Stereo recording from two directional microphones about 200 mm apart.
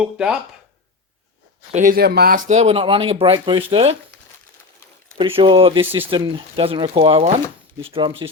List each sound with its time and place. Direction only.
0.0 s speech: 5° right (ahead or behind)
1.7 s speech: 45° right (ahead or behind); by 3.9 s 25° right (ahead or behind)
5.1 s speech: 25° right (ahead or behind)